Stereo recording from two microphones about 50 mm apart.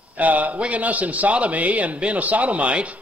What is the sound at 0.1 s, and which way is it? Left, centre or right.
A man's voice, right.